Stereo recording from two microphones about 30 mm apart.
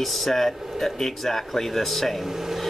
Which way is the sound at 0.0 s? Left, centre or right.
Centre.